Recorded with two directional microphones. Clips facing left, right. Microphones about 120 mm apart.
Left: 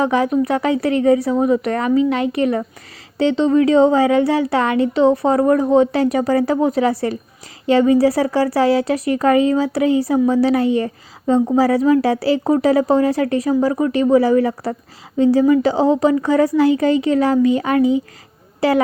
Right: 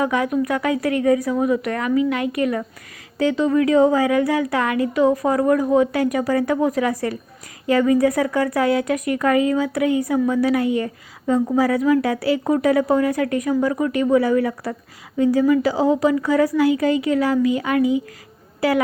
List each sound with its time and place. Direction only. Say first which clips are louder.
0.0 s speech: left 4 dB; 30° left (ahead or behind)